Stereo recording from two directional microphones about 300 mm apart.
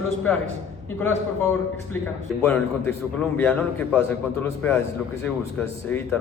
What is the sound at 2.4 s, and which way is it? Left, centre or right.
A man's voice, centre.